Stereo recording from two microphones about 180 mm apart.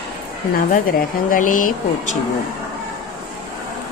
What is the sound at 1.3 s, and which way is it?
Music, 50° left (ahead or behind).